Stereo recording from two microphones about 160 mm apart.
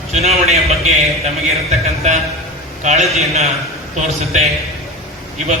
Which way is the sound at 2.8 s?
45° right (ahead or behind).